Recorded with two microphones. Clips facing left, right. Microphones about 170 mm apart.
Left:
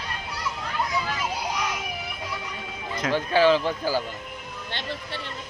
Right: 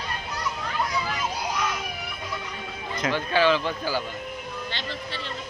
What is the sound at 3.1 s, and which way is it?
Speech, 40° left (ahead or behind).